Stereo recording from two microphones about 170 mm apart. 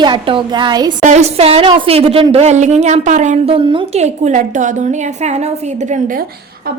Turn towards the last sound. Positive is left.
turn(degrees=-45)  # may be behind; listen again after turning